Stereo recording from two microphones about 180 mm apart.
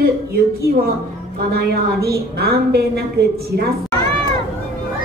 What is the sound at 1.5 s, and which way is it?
A woman's voice, 60° right (ahead or behind).